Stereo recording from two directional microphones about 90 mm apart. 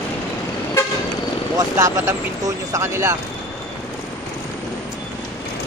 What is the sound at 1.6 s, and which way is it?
Speech, 35° right (ahead or behind).